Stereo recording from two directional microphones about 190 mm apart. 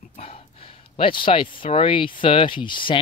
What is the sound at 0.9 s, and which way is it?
Speech, 25° left (ahead or behind).